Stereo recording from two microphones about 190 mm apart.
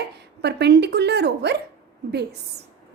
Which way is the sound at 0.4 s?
60° right (ahead or behind).